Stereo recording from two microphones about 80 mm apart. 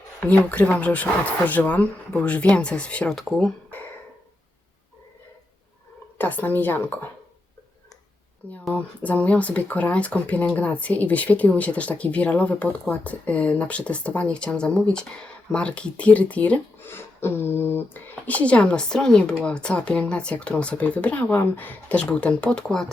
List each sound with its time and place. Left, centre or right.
0.2 s speech: left
3.2 s speech: centre
6.1 s a woman's voice: left
8.7 s speech: centre
16.9 s speech: left; by 22.9 s centre